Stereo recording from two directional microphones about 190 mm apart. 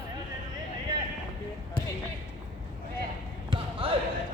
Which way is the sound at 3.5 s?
30° right (ahead or behind).